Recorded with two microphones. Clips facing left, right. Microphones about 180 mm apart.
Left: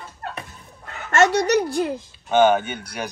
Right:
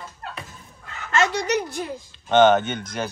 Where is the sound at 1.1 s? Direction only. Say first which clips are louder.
Left 5 dB; 65° left (ahead or behind).